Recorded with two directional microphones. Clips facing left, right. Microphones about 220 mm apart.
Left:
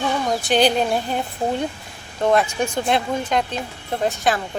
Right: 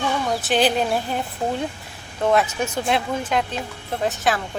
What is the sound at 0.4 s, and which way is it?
Speech, centre (ahead or behind).